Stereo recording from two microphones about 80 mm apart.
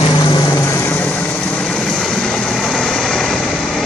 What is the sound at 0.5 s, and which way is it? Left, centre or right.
Vehicle, left.